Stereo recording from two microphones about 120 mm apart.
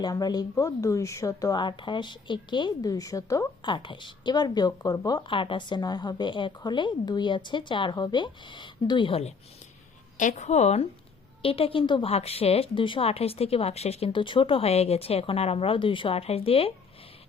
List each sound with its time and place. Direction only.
0.0 s speech: 35° left (ahead or behind)
3.6 s speech: 40° left (ahead or behind)
10.2 s a woman's voice: 90° left; by 10.8 s 65° left (ahead or behind)
11.4 s speech: 50° left (ahead or behind)
12.0 s speech: 55° left (ahead or behind)
14.1 s speech: 45° left (ahead or behind)